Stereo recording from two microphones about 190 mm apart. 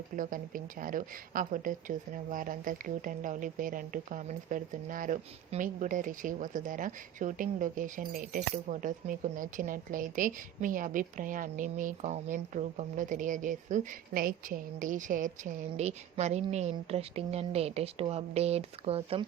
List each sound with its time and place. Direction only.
0.2 s speech: 45° right (ahead or behind)